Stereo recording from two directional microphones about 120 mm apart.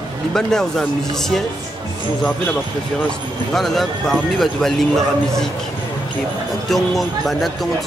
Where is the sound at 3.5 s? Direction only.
Centre (ahead or behind).